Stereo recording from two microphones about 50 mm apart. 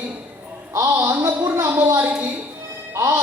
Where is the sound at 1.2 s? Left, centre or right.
Right.